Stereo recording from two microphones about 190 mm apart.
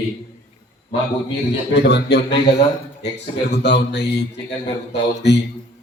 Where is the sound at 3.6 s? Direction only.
65° left (ahead or behind).